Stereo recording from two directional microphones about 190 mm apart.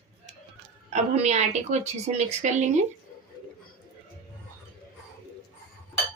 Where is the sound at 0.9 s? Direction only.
35° right (ahead or behind).